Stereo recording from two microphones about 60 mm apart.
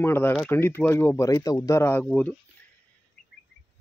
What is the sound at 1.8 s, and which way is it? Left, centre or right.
Speech, left.